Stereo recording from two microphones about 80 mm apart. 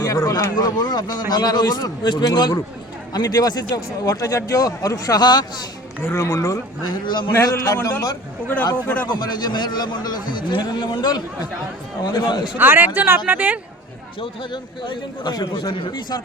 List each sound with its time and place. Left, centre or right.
0.0 s speech: left
0.5 s a man's voice: left
6.0 s speech: left
6.9 s a man's voice: left
7.4 s a man's voice: left
9.0 s a man's voice: left
12.5 s speech: right
14.2 s a man's voice: left